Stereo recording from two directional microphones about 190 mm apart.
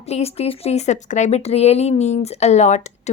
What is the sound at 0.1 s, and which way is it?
Speech, 30° left (ahead or behind).